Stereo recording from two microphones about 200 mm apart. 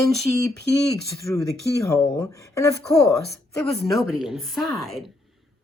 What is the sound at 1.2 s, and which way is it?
Speech, 15° left (ahead or behind).